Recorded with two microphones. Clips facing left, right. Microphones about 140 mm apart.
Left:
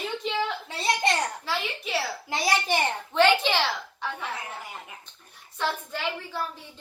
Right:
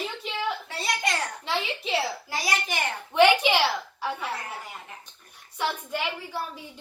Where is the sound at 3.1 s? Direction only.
15° right (ahead or behind).